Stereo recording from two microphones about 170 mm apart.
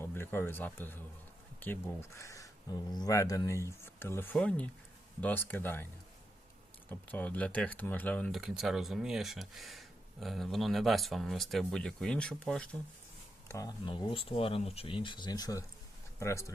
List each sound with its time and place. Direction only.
0.0 s speech: 15° left (ahead or behind)
6.9 s speech: 10° left (ahead or behind)
8.4 s speech: centre (ahead or behind)
13.5 s speech: 20° left (ahead or behind)